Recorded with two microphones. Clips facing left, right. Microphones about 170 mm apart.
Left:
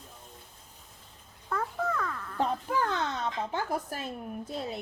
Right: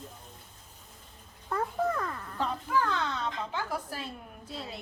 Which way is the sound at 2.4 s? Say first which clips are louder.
Left 1 dB; 50° left (ahead or behind).